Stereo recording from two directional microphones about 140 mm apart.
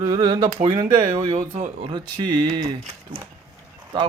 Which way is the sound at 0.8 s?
40° right (ahead or behind).